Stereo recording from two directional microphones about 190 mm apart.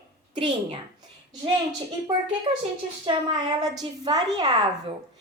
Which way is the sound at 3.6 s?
20° right (ahead or behind).